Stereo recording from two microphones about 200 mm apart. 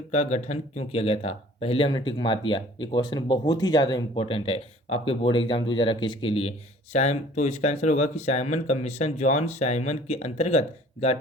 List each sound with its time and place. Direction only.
0.1 s speech: 35° left (ahead or behind)